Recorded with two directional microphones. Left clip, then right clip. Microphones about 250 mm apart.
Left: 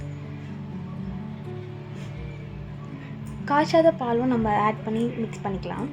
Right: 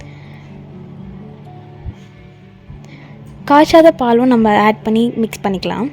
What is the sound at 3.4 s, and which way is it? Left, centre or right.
A woman's voice, right.